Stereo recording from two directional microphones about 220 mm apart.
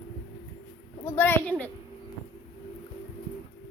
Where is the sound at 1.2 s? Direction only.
10° left (ahead or behind).